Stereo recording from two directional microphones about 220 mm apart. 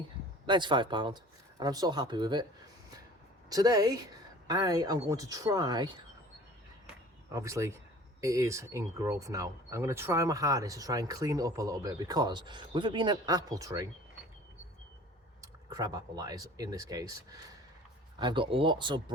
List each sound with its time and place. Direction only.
0.4 s speech: 20° right (ahead or behind)
3.5 s speech: 15° right (ahead or behind)
7.3 s speech: 15° right (ahead or behind)
15.4 s speech: 15° right (ahead or behind)